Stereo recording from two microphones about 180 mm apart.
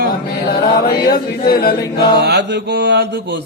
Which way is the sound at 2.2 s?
70° right (ahead or behind).